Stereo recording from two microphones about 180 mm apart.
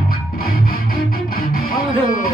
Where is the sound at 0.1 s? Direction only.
55° left (ahead or behind).